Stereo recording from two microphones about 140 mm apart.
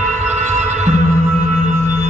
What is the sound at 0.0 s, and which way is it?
Music, 55° right (ahead or behind).